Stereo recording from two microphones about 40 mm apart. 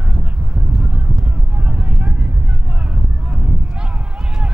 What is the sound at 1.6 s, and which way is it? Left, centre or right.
Vehicle, right.